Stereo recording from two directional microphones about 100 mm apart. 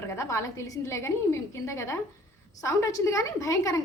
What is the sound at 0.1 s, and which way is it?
A woman's voice, 30° left (ahead or behind).